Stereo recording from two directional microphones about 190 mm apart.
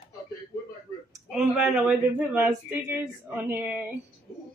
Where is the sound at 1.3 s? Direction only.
5° right (ahead or behind).